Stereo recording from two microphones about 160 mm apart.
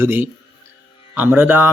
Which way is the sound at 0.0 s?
15° right (ahead or behind).